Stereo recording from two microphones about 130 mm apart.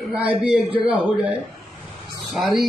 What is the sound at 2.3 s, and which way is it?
Speech, centre (ahead or behind).